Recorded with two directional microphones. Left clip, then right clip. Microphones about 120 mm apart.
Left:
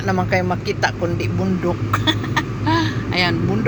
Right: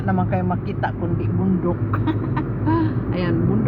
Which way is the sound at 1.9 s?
15° left (ahead or behind).